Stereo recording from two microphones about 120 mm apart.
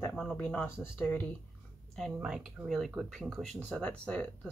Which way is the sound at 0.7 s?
20° left (ahead or behind).